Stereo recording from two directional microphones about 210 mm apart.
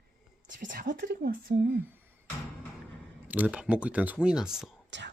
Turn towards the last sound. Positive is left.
turn(degrees=-60)  # may be behind; listen again after turning